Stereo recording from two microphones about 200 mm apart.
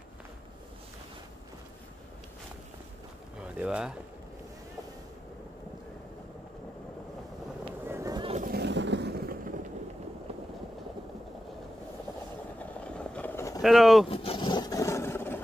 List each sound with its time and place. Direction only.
3.5 s speech: 5° right (ahead or behind)
7.8 s boat: 15° right (ahead or behind)
8.4 s a sound: 50° right (ahead or behind)
12.8 s vehicle: 5° left (ahead or behind)
13.6 s speech: centre (ahead or behind)
14.0 s vehicle: 30° left (ahead or behind); by 15.4 s 10° left (ahead or behind)